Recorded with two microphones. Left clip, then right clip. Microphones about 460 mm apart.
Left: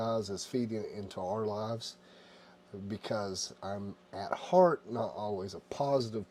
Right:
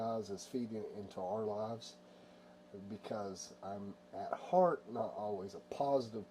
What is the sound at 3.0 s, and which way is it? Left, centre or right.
Speech, left.